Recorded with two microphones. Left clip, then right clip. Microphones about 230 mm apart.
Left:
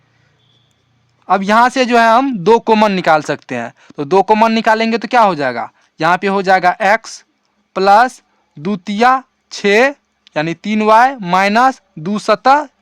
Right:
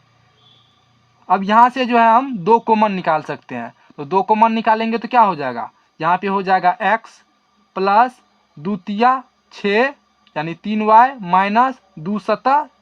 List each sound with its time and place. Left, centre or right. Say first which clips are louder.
1.3 s speech: left 1 dB; left